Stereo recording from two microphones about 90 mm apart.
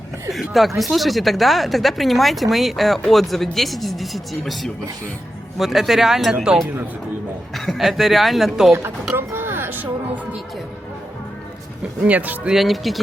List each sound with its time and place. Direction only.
0.3 s speech: centre (ahead or behind)
7.5 s speech: centre (ahead or behind)
9.1 s a sound: 25° right (ahead or behind)
11.8 s speech: 15° right (ahead or behind)
12.5 s speech: centre (ahead or behind)